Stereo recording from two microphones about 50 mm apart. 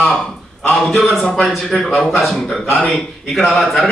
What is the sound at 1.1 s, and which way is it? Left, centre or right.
Speech, left.